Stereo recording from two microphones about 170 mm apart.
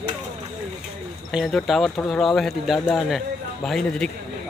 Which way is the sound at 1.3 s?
Centre (ahead or behind).